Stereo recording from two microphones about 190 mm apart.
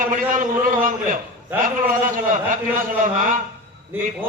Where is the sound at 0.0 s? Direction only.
45° right (ahead or behind).